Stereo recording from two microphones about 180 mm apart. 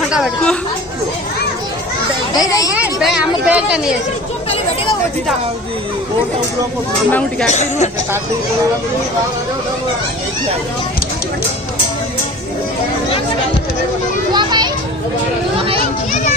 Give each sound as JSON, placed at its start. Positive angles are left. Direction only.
{"t": 0.1, "sound": "speech", "side_deg": 0}
{"t": 2.3, "sound": "a child's voice", "side_deg": 20}
{"t": 2.7, "sound": "a woman's voice", "side_deg": -5}
{"t": 7.1, "sound": "speech", "side_deg": 5}
{"t": 7.4, "sound": "speech", "side_deg": 40}
{"t": 14.3, "sound": "children playing", "side_deg": -25}
{"t": 15.8, "sound": "children playing", "side_deg": 45}